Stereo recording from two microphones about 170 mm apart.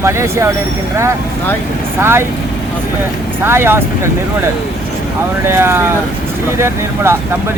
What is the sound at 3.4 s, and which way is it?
Speech, 15° right (ahead or behind).